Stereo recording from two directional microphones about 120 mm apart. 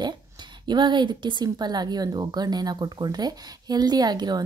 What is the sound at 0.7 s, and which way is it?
Speech, 40° right (ahead or behind).